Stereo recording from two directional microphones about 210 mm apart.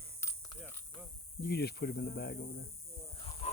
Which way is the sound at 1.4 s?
50° left (ahead or behind).